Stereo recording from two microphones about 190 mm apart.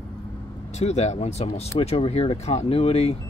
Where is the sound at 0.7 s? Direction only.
35° left (ahead or behind).